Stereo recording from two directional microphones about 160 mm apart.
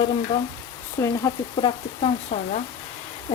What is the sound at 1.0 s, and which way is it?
Speech, 15° left (ahead or behind).